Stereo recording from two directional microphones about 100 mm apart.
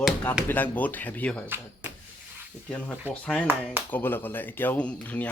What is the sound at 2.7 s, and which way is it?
Speech, 10° left (ahead or behind).